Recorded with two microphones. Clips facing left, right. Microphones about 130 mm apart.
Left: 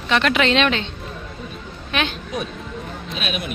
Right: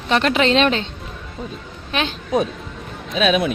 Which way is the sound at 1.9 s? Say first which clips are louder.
Right 1 dB; 30° right (ahead or behind).